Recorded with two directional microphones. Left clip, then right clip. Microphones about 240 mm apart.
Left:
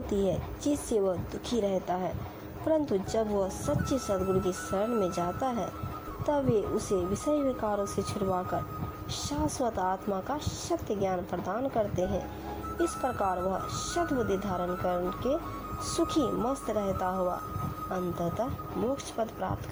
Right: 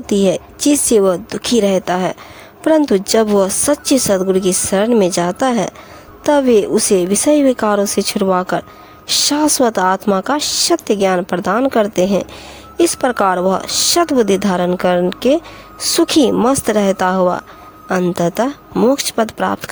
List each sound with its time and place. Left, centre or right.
0.1 s speech: right